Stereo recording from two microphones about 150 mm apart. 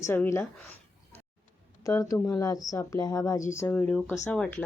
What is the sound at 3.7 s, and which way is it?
Speech, 10° left (ahead or behind).